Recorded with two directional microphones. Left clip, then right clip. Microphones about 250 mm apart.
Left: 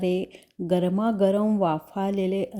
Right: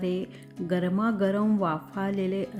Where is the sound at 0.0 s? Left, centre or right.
Centre.